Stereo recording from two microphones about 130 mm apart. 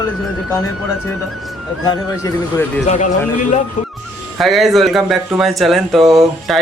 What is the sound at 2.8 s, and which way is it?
Speech, 65° left (ahead or behind).